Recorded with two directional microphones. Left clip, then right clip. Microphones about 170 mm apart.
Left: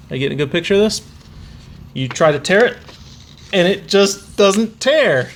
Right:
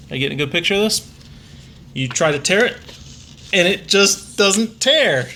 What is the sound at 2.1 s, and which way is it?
Speech, 40° left (ahead or behind).